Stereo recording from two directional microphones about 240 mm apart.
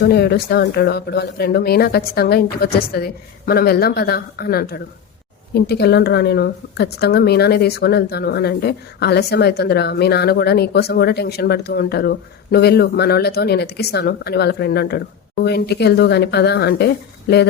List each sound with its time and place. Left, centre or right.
0.0 s speech: left